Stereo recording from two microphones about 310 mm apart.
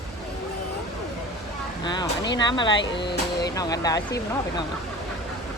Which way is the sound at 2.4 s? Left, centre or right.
Centre.